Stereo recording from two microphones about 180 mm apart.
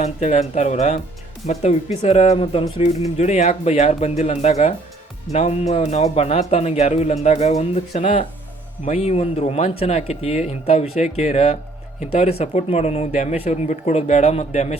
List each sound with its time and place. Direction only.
0.0 s speech: 40° left (ahead or behind)